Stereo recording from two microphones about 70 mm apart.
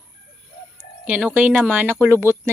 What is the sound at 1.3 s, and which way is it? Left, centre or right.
Speech, centre.